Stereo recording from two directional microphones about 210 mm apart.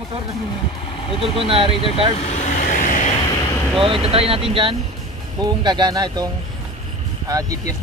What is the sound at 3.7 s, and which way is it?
Speech, 25° right (ahead or behind).